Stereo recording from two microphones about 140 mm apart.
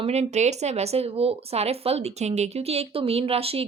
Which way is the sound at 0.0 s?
50° right (ahead or behind).